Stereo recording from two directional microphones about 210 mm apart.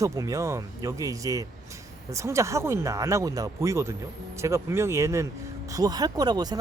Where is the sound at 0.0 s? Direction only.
15° right (ahead or behind).